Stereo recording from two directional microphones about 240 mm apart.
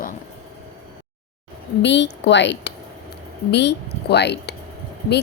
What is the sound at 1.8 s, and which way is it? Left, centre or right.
A woman's voice, left.